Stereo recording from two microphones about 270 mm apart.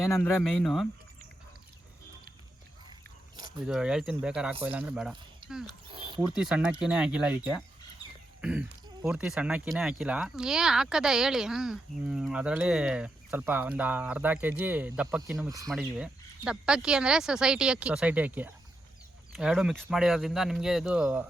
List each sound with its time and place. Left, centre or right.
0.1 s speech: centre
3.7 s speech: centre
5.4 s a sound: centre
6.3 s speech: centre
8.4 s throat clearing: centre
9.0 s speech: centre
15.7 s speech: centre